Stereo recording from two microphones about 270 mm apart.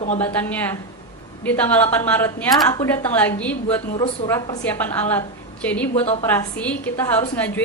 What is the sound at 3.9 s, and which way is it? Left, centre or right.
Speech, centre.